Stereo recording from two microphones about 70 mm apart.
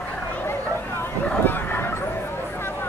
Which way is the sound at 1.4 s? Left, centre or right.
Left.